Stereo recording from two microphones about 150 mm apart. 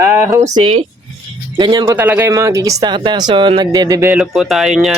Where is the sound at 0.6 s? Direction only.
45° right (ahead or behind).